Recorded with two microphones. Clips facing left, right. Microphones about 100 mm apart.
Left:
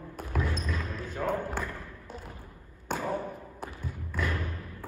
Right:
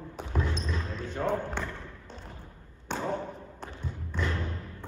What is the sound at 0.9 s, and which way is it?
Basketball bounce, 5° left (ahead or behind).